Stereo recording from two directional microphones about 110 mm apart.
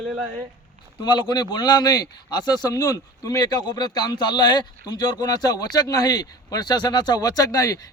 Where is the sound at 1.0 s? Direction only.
45° left (ahead or behind).